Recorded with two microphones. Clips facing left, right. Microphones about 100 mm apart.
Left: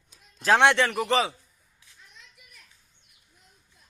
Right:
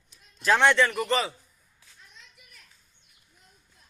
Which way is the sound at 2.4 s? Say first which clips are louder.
Left 1 dB; centre (ahead or behind).